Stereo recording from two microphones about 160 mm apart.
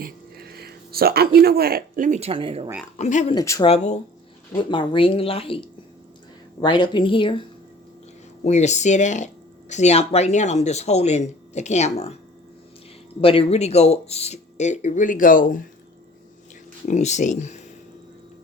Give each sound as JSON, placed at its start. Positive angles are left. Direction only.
{"t": 0.0, "sound": "speech", "side_deg": -80}
{"t": 3.0, "sound": "speech", "side_deg": 45}
{"t": 3.3, "sound": "speech", "side_deg": 20}
{"t": 3.6, "sound": "speech", "side_deg": 40}
{"t": 4.5, "sound": "speech", "side_deg": 30}
{"t": 8.4, "sound": "speech", "side_deg": 45}
{"t": 13.2, "sound": "speech", "side_deg": 35}
{"t": 16.8, "sound": "speech", "side_deg": 45}